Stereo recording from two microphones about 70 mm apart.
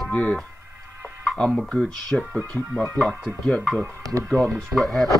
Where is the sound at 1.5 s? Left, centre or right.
Centre.